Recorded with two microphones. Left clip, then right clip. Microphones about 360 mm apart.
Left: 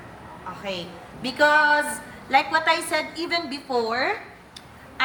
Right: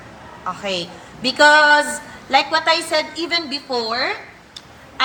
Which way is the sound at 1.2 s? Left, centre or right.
Centre.